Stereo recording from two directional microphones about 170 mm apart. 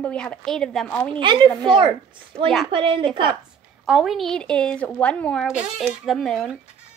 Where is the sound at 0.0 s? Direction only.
5° left (ahead or behind).